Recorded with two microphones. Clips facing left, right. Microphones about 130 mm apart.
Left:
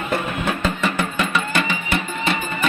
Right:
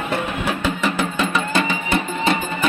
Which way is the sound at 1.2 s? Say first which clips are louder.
Right 2 dB; 20° right (ahead or behind).